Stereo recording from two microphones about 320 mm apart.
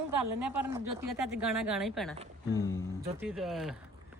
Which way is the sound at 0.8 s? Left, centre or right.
Right.